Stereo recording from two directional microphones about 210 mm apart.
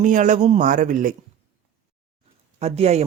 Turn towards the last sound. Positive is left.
turn(degrees=-30)  # may be behind; listen again after turning